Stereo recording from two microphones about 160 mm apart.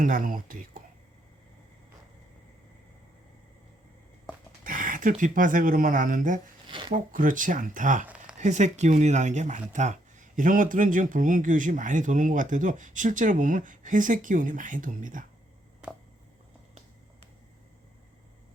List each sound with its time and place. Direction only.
0.0 s speech: 60° right (ahead or behind)
4.6 s speech: 55° right (ahead or behind)
6.7 s a sound: 30° right (ahead or behind)
6.9 s speech: 55° right (ahead or behind)
8.0 s a sound: 10° right (ahead or behind)
8.4 s speech: 50° right (ahead or behind)